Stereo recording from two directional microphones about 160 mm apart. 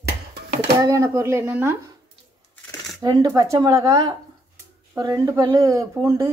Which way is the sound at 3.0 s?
20° right (ahead or behind).